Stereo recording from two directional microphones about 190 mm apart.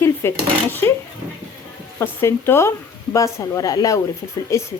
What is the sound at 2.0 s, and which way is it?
Speech, 15° left (ahead or behind).